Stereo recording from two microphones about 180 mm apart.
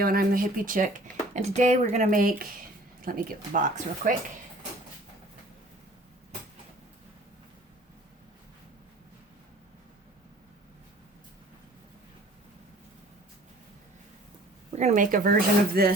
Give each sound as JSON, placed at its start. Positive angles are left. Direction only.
{"t": 0.0, "sound": "speech", "side_deg": -55}
{"t": 14.7, "sound": "speech", "side_deg": -40}